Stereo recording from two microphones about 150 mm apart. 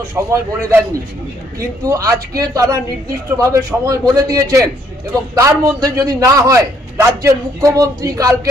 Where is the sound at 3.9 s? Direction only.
25° right (ahead or behind).